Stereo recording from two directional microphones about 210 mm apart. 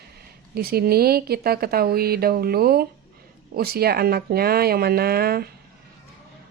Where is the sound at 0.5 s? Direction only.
45° right (ahead or behind).